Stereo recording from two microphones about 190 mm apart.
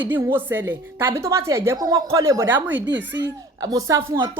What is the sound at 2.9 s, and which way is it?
Speech, 70° right (ahead or behind).